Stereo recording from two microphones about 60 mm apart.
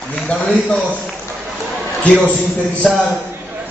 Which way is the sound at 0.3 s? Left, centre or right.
Left.